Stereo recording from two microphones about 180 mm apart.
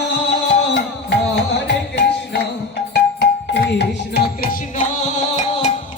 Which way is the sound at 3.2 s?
75° left (ahead or behind).